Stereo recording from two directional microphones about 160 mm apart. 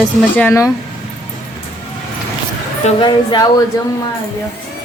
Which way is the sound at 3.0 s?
30° left (ahead or behind).